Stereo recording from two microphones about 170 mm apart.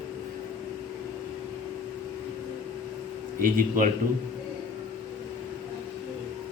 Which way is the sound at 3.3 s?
55° right (ahead or behind).